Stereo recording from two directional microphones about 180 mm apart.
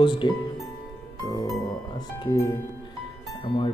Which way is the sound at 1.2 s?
20° left (ahead or behind).